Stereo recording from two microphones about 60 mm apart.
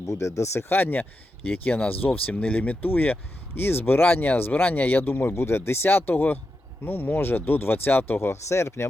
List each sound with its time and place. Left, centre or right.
0.0 s speech: left
0.7 s speech: left